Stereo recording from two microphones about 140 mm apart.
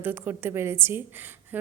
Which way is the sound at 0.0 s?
15° right (ahead or behind).